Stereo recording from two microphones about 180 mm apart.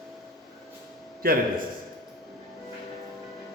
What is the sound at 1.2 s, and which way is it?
Speech, 55° right (ahead or behind).